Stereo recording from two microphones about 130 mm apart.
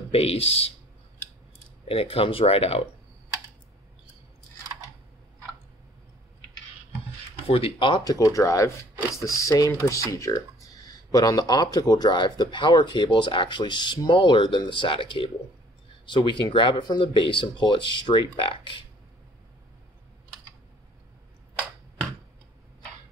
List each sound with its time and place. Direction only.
0.1 s speech: 50° left (ahead or behind)
1.9 s speech: 45° left (ahead or behind)
7.4 s speech: 45° left (ahead or behind)
8.0 s speech: 25° left (ahead or behind); by 18.9 s 40° left (ahead or behind)